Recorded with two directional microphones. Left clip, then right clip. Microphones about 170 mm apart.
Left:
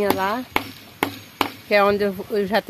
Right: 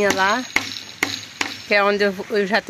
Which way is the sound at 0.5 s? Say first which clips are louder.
Right 2 dB; 15° left (ahead or behind).